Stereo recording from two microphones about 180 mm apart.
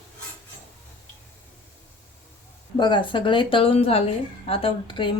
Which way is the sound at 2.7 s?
25° left (ahead or behind).